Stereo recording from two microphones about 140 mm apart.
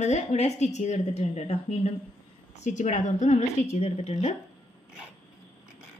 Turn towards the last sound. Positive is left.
turn(degrees=60)  # may be behind; listen again after turning